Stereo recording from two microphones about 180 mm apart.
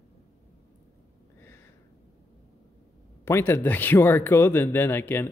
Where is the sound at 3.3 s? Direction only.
15° left (ahead or behind).